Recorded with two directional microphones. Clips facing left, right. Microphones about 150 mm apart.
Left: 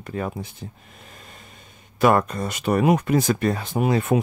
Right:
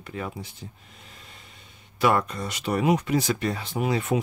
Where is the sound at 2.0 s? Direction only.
45° left (ahead or behind).